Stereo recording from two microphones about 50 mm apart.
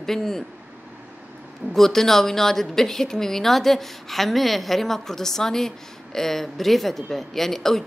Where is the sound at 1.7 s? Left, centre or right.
Centre.